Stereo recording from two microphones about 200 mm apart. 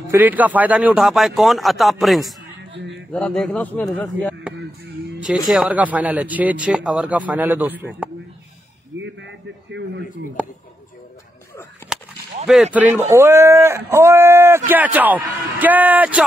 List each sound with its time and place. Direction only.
0.1 s a man's voice: 10° right (ahead or behind); by 4.4 s 10° left (ahead or behind)
5.5 s speech: 5° right (ahead or behind)
8.9 s a sound: 65° right (ahead or behind)
10.4 s speech: 5° right (ahead or behind)
12.4 s a man's voice: 5° right (ahead or behind)